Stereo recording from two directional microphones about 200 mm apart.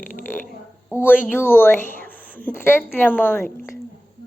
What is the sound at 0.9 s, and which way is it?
A woman's voice, 10° left (ahead or behind).